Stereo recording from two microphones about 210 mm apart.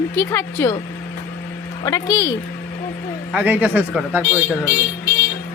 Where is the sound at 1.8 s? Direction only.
15° left (ahead or behind).